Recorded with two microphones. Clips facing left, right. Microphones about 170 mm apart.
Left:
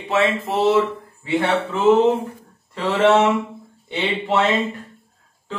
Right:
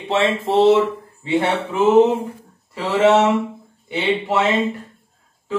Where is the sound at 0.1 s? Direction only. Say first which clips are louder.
Right 2 dB; 25° right (ahead or behind).